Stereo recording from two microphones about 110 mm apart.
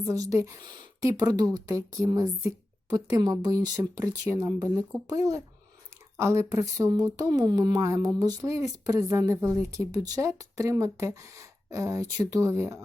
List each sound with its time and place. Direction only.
0.0 s speech: 30° right (ahead or behind)